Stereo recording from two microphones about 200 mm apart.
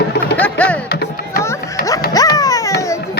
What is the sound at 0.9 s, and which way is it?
Music, 50° left (ahead or behind).